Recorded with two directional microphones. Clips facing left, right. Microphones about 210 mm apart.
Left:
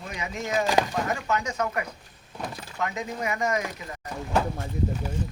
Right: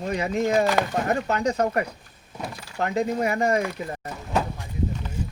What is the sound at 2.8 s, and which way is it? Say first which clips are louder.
Speech: right 7 dB; 35° right (ahead or behind).